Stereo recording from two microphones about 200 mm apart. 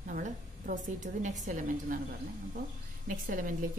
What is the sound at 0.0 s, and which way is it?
A woman's voice, 40° right (ahead or behind).